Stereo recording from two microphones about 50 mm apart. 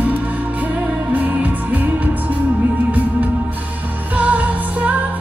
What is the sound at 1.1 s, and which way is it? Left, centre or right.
Music, right.